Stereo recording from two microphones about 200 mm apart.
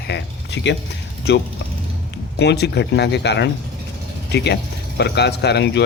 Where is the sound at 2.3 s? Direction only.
55° left (ahead or behind).